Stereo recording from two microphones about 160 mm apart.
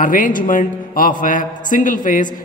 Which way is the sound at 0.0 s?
60° left (ahead or behind).